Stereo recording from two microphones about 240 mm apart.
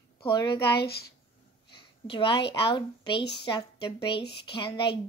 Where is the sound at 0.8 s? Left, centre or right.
Left.